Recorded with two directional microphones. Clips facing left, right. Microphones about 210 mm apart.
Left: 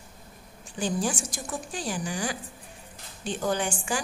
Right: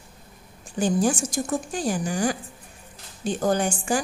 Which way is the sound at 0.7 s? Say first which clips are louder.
Right 6 dB; 45° right (ahead or behind).